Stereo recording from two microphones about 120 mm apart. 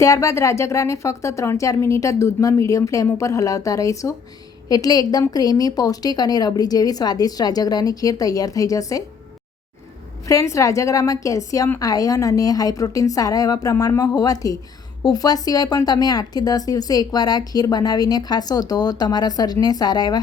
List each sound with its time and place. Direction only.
0.0 s speech: 25° left (ahead or behind)
10.2 s speech: 25° left (ahead or behind)